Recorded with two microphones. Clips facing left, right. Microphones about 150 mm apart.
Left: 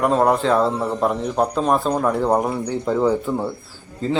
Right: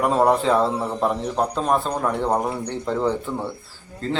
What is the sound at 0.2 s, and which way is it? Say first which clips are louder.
A man's voice: left 1 dB; centre (ahead or behind).